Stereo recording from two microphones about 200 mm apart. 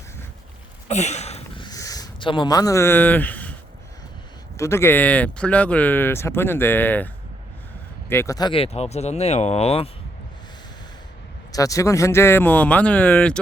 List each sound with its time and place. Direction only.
0.9 s a sound: 35° left (ahead or behind); by 3.5 s 10° left (ahead or behind)
4.5 s speech: 15° left (ahead or behind)
8.1 s speech: 15° left (ahead or behind)
11.5 s speech: 15° left (ahead or behind)